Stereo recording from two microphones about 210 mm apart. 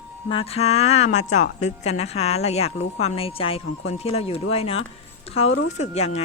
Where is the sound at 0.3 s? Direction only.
25° left (ahead or behind).